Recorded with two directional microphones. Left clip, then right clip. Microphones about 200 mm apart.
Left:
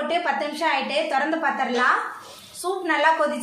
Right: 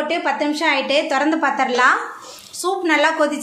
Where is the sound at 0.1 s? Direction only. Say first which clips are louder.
Right 4 dB; 35° right (ahead or behind).